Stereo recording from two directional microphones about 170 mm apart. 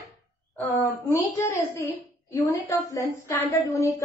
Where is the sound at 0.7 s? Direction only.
15° left (ahead or behind).